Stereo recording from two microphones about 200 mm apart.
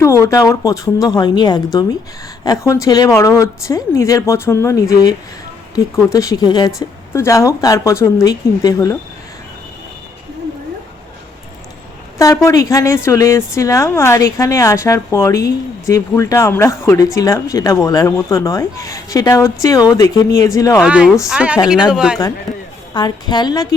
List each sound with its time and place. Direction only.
0.0 s a woman's voice: 15° left (ahead or behind)
12.2 s a woman's voice: 15° left (ahead or behind)
20.8 s speech: 5° right (ahead or behind)
23.0 s a woman's voice: 20° left (ahead or behind)